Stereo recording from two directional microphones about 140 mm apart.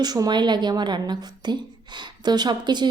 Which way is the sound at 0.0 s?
30° right (ahead or behind).